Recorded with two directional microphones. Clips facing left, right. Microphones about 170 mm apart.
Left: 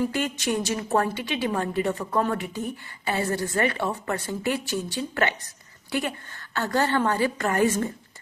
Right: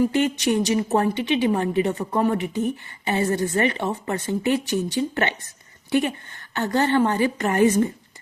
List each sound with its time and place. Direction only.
0.1 s a woman's voice: 20° right (ahead or behind)